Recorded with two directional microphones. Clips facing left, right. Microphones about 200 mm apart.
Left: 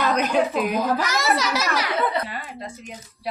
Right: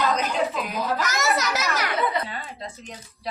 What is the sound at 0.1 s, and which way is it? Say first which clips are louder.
Speech: left 4 dB; 60° left (ahead or behind).